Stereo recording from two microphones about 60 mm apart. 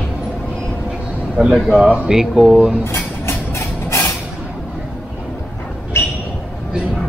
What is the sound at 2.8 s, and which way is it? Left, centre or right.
Vehicle, left.